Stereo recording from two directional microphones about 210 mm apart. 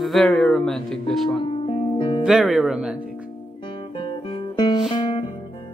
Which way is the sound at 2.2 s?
5° right (ahead or behind).